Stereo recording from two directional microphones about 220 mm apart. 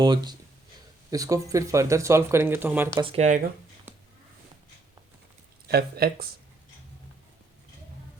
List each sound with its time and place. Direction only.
0.0 s speech: 20° right (ahead or behind)
3.0 s speech: 30° right (ahead or behind)
3.9 s a sound: 10° right (ahead or behind)
5.6 s speech: 45° right (ahead or behind)